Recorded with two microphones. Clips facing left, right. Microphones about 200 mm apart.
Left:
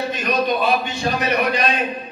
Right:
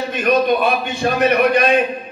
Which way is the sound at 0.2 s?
55° right (ahead or behind).